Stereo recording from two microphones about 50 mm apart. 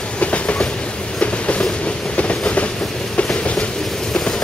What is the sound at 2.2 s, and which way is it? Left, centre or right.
Train, left.